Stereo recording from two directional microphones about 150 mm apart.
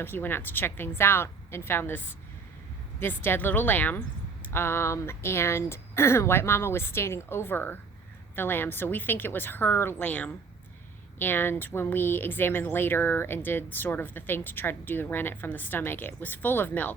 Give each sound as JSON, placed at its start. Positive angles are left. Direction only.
{"t": 0.0, "sound": "speech", "side_deg": 15}